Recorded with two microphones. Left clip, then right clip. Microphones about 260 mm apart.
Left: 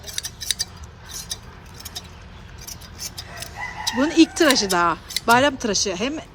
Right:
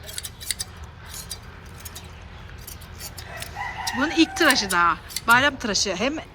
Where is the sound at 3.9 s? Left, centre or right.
Centre.